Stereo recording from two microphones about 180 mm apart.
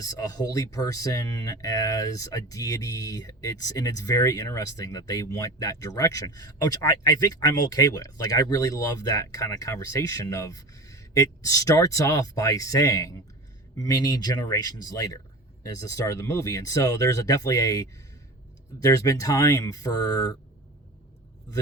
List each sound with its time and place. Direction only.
0.0 s speech: 20° left (ahead or behind)